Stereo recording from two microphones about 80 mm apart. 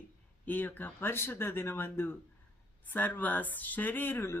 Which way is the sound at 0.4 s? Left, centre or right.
Left.